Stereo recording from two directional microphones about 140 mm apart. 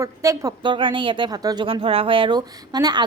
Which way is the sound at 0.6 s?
35° right (ahead or behind).